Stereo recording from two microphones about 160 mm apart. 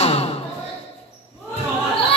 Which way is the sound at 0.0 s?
40° left (ahead or behind).